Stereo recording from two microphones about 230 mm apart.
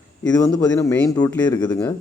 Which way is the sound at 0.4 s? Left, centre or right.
Centre.